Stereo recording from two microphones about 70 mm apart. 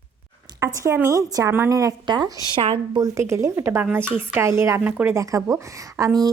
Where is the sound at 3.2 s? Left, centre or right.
Right.